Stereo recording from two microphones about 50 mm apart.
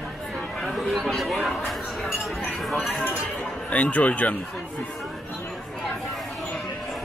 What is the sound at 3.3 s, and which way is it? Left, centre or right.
Speech, left.